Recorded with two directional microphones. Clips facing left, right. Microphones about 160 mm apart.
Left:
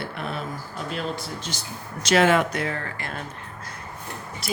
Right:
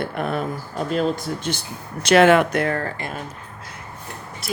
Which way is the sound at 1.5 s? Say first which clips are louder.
Right 6 dB; 60° right (ahead or behind).